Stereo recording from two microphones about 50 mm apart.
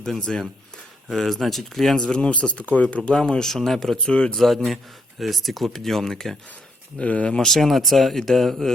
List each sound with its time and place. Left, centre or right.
0.1 s speech: centre
2.1 s speech: left
3.1 s speech: centre
4.1 s speech: centre
4.4 s speech: centre
7.0 s speech: left
7.3 s speech: centre